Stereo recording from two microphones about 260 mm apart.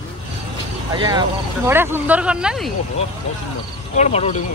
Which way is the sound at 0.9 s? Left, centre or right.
Centre.